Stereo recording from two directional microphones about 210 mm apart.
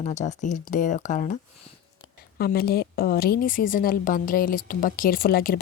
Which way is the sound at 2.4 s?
45° left (ahead or behind).